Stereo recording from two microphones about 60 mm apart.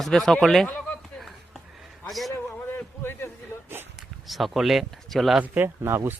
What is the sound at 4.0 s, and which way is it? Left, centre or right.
Speech, centre.